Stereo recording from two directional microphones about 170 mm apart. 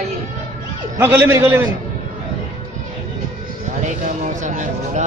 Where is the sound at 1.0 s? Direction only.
15° right (ahead or behind).